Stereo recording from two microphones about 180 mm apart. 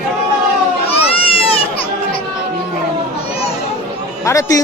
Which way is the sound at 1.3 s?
30° left (ahead or behind).